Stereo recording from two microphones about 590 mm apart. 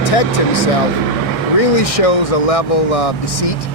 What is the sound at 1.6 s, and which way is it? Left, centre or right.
Speech, left.